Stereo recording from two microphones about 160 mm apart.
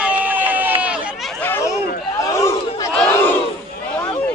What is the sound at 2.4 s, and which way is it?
Chatter, 20° left (ahead or behind).